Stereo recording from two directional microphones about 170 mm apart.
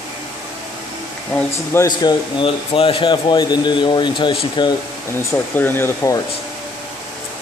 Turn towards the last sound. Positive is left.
turn(degrees=15)  # may be behind; listen again after turning